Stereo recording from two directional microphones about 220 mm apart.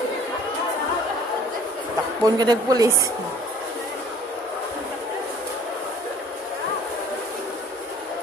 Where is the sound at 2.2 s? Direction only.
15° right (ahead or behind).